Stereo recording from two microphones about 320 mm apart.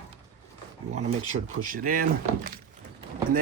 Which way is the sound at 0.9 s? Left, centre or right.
Right.